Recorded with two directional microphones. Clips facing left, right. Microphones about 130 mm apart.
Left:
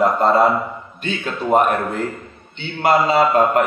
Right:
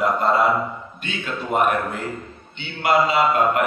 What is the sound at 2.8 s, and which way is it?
Speech, 35° left (ahead or behind).